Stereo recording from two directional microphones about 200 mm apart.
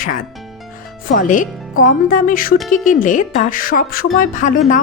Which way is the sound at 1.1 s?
40° left (ahead or behind).